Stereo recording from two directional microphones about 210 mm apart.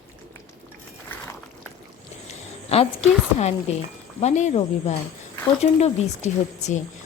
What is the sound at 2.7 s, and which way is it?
A woman's voice, 30° left (ahead or behind).